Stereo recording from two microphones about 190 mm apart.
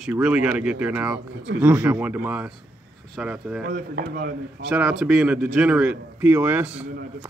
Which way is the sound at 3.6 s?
60° right (ahead or behind).